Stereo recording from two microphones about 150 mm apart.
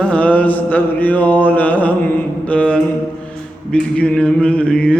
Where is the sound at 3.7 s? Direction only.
5° left (ahead or behind).